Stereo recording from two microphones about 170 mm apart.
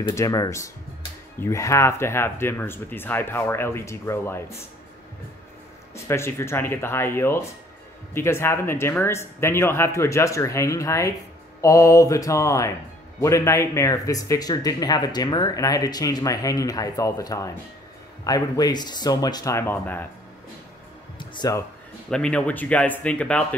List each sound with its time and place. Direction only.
0.1 s speech: 20° left (ahead or behind)
5.9 s speech: 15° left (ahead or behind)
21.2 s speech: 25° left (ahead or behind)
22.1 s speech: 5° left (ahead or behind)